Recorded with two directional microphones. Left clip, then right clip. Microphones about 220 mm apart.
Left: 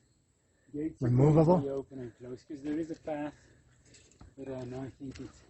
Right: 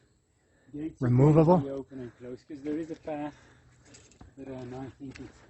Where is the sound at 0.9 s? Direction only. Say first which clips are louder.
Right 3 dB; 20° right (ahead or behind).